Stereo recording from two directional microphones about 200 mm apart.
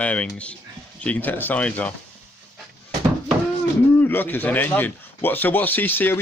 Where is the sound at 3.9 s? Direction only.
10° left (ahead or behind).